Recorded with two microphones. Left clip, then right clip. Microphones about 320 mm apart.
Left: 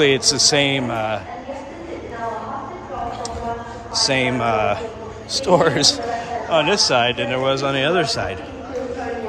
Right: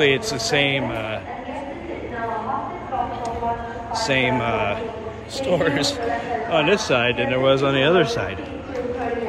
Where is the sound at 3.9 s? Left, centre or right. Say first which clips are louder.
Left 1 dB; centre.